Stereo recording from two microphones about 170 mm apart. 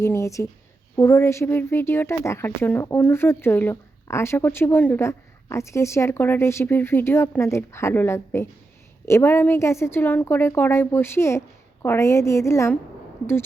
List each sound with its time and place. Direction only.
0.0 s speech: 15° left (ahead or behind)